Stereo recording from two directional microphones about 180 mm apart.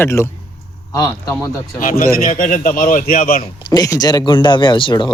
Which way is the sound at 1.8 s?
50° left (ahead or behind).